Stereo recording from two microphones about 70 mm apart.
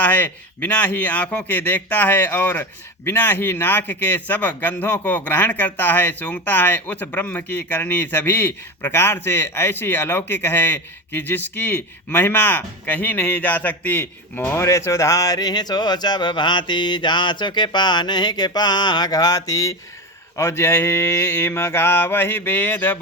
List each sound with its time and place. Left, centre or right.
0.0 s a man's voice: left
14.6 s speech: left
20.3 s mantra: left